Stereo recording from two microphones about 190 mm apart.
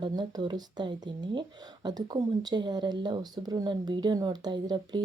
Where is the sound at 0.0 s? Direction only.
20° right (ahead or behind).